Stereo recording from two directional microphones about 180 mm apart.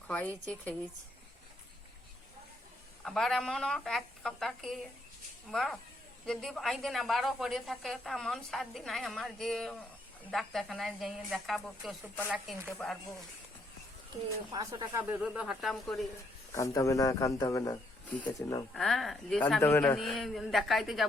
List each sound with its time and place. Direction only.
0.1 s speech: 10° left (ahead or behind)
3.0 s a woman's voice: centre (ahead or behind)
14.5 s speech: 20° right (ahead or behind)
15.2 s a woman's voice: 5° right (ahead or behind)
16.5 s a man's voice: 15° left (ahead or behind)
18.7 s a woman's voice: 5° left (ahead or behind)
20.0 s a woman's voice: centre (ahead or behind)